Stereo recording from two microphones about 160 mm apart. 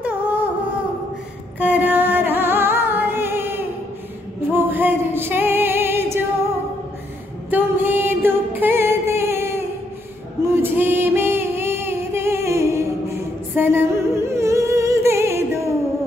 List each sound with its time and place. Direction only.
0.0 s humming: 10° right (ahead or behind)
1.6 s music: 10° right (ahead or behind)
7.5 s music: 15° right (ahead or behind)